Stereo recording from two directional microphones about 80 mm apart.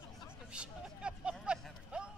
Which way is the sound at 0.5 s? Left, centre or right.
Centre.